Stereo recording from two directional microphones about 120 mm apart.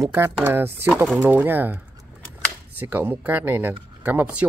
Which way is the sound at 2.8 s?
15° right (ahead or behind).